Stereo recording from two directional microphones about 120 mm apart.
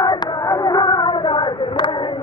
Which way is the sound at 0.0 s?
30° left (ahead or behind).